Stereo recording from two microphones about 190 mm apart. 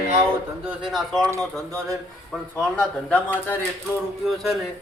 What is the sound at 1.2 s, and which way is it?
Speech, 20° right (ahead or behind).